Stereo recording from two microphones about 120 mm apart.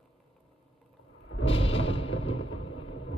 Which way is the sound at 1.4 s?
50° left (ahead or behind).